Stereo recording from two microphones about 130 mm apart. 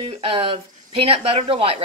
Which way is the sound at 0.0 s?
50° right (ahead or behind).